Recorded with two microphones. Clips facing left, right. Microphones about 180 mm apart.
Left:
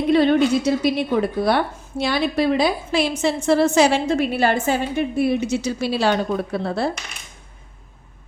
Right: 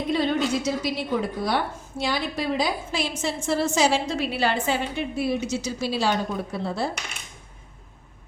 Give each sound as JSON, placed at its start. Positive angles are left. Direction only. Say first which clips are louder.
{"t": 0.1, "sound": "a woman's voice", "louder": "left 8 dB", "side_deg": 65}